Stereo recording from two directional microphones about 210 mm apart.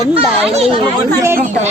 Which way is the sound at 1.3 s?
35° right (ahead or behind).